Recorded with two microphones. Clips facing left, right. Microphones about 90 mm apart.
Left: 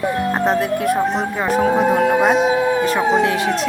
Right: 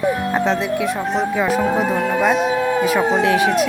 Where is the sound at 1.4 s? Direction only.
Centre (ahead or behind).